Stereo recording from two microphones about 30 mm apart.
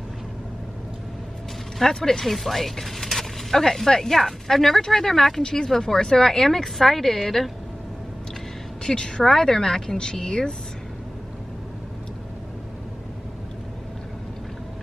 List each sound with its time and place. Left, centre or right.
1.8 s speech: centre
2.2 s speech: centre
5.4 s a woman's voice: left; by 7.5 s centre
8.8 s a woman's voice: left
9.2 s a woman's voice: centre